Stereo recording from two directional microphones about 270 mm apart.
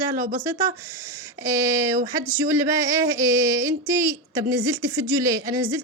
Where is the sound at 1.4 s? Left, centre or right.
Centre.